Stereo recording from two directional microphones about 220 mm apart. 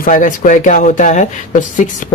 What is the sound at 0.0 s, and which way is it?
Speech, 35° left (ahead or behind).